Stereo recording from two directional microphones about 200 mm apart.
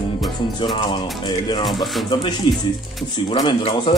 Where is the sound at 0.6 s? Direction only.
25° left (ahead or behind).